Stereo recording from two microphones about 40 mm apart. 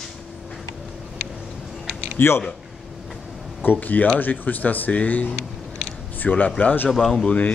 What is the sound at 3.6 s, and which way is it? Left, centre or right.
Speech, left.